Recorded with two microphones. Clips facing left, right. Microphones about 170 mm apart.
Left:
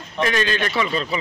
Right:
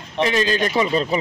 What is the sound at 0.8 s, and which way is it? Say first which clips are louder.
Speech: right 4 dB; 40° right (ahead or behind).